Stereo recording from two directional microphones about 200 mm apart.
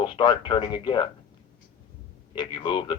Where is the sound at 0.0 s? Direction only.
25° left (ahead or behind).